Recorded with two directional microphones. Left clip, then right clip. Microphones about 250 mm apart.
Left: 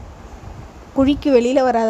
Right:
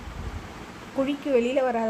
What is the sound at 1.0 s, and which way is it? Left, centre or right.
Speech, left.